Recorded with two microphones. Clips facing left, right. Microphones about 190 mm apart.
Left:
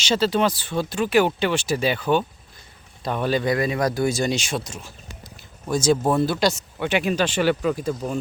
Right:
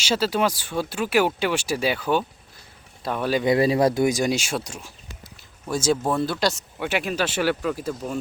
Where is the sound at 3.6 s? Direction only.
30° right (ahead or behind).